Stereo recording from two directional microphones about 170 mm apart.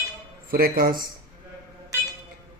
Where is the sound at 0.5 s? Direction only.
60° right (ahead or behind).